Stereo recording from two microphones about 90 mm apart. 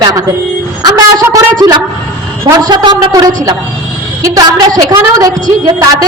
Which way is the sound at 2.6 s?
50° right (ahead or behind).